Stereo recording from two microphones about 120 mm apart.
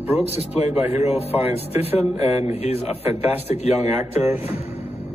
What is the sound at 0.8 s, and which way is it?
Speech, 15° right (ahead or behind).